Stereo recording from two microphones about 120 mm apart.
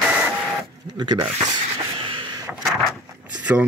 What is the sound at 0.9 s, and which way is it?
Speech, 35° right (ahead or behind).